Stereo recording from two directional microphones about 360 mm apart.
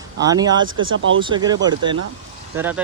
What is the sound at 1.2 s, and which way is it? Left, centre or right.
Speech, centre.